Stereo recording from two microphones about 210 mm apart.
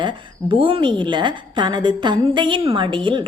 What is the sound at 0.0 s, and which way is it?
A woman's voice, 25° right (ahead or behind).